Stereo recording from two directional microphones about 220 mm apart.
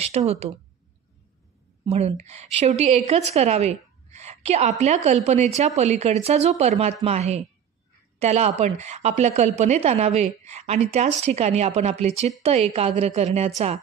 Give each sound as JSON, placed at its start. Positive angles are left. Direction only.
{"t": 0.2, "sound": "a woman's voice", "side_deg": -30}
{"t": 1.9, "sound": "a woman's voice", "side_deg": -30}